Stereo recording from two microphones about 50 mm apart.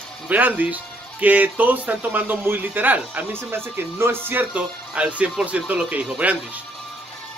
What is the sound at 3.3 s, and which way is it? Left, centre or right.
Speech, right.